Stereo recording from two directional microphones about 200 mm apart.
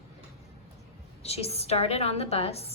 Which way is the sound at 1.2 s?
30° left (ahead or behind).